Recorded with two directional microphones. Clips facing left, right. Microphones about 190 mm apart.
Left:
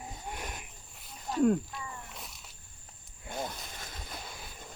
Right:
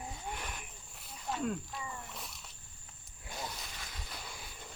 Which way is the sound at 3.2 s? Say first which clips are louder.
Left 5 dB; 50° left (ahead or behind).